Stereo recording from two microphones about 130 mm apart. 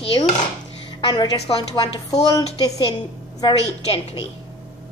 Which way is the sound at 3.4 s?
45° left (ahead or behind).